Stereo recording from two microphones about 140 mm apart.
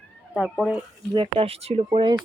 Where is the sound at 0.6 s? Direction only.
10° right (ahead or behind).